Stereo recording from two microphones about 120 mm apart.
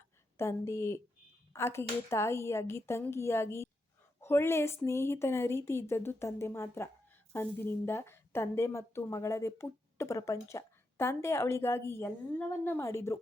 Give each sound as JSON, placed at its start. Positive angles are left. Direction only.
{"t": 0.3, "sound": "a woman's voice", "side_deg": 25}